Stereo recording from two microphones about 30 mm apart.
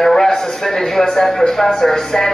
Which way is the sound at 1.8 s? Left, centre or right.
Centre.